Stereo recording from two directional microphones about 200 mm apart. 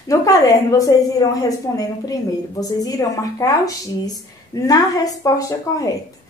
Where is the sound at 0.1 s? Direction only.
15° left (ahead or behind).